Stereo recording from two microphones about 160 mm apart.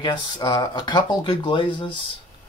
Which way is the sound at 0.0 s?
30° left (ahead or behind).